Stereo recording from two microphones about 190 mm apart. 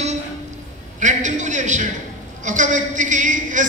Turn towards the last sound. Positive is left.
turn(degrees=-40)  # may be behind; listen again after turning